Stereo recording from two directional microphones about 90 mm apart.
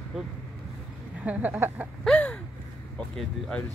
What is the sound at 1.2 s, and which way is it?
Speech, 20° right (ahead or behind).